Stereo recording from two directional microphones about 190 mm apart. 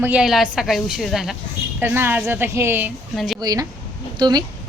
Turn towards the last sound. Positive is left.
turn(degrees=-20)  # may be behind; listen again after turning